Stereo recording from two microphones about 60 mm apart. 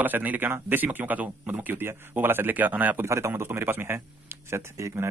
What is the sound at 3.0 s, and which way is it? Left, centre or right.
Speech, right.